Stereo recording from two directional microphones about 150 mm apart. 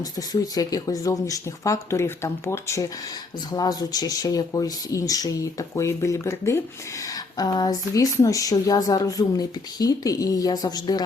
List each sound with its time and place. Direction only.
0.0 s speech: 25° left (ahead or behind)